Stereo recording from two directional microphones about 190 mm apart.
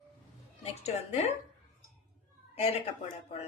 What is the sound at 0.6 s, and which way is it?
Speech, 35° left (ahead or behind).